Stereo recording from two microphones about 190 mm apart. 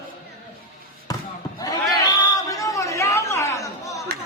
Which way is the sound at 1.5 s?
20° left (ahead or behind).